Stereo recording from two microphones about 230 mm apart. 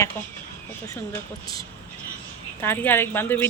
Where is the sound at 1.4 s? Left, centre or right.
Centre.